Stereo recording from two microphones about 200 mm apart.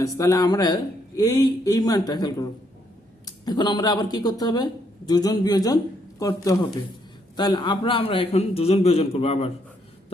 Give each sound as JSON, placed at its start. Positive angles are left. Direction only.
{"t": 0.0, "sound": "speech", "side_deg": 15}